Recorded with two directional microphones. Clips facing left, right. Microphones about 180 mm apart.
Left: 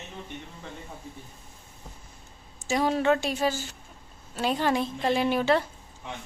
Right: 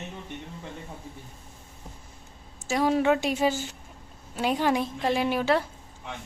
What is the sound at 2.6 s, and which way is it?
A woman's voice, 5° right (ahead or behind).